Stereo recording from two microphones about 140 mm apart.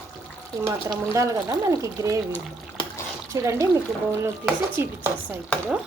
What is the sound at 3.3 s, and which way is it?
Speech, 20° right (ahead or behind).